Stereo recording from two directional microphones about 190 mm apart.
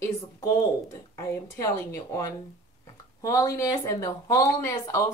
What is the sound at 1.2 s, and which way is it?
Speech, 15° left (ahead or behind).